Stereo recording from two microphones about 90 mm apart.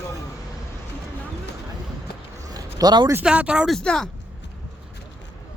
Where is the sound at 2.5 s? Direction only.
45° right (ahead or behind).